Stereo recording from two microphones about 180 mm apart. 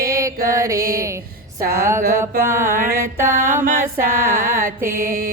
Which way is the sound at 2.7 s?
50° right (ahead or behind).